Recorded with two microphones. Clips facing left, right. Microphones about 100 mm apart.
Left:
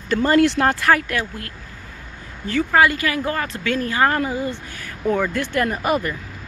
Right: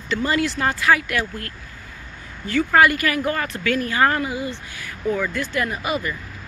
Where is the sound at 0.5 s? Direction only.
60° left (ahead or behind).